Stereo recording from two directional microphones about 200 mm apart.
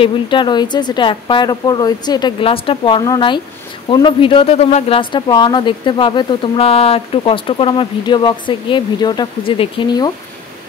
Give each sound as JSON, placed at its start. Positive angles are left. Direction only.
{"t": 0.0, "sound": "speech", "side_deg": 25}